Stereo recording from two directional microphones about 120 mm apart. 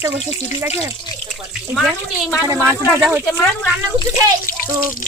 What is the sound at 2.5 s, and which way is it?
Speech, 20° right (ahead or behind).